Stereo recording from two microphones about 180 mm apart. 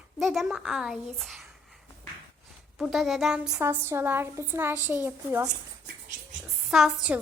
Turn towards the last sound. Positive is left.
turn(degrees=-5)  # may be behind; listen again after turning